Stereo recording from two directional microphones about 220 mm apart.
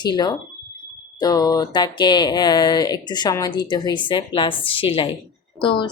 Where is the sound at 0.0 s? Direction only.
20° left (ahead or behind).